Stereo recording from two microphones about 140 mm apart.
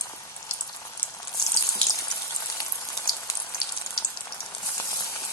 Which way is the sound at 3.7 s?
20° left (ahead or behind).